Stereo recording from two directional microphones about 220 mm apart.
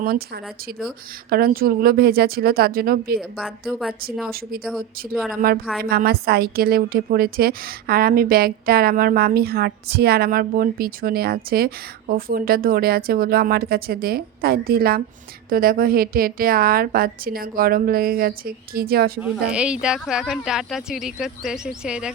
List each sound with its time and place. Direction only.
1.3 s a woman's voice: 40° right (ahead or behind)
3.2 s speech: centre (ahead or behind)
4.3 s a woman's voice: 40° right (ahead or behind)
5.1 s speech: centre (ahead or behind)
5.4 s a woman's voice: 40° right (ahead or behind)
19.2 s speech: 5° right (ahead or behind)